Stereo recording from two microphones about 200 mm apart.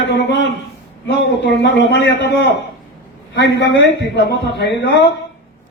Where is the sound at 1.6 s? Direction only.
60° left (ahead or behind).